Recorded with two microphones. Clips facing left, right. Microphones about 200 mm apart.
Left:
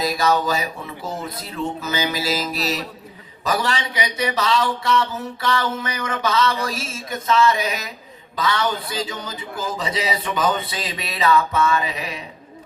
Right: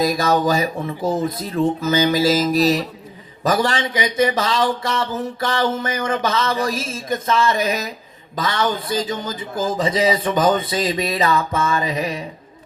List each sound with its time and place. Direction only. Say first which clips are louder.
0.0 s speech: right 3 dB; 45° right (ahead or behind)